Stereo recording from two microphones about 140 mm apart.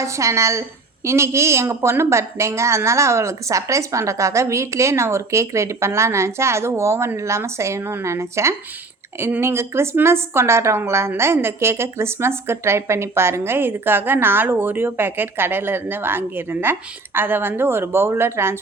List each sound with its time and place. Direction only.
0.0 s a woman's voice: 20° right (ahead or behind)